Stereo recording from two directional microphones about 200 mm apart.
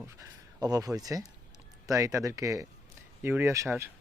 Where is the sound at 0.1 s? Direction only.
15° right (ahead or behind).